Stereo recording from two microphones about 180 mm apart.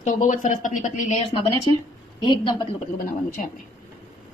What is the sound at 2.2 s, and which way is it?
Speech, 25° left (ahead or behind).